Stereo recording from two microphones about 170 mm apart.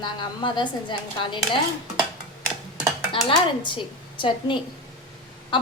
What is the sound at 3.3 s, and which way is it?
A woman's voice, 30° left (ahead or behind).